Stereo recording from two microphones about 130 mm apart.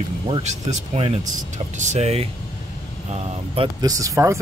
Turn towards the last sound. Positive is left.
turn(degrees=-25)  # may be behind; listen again after turning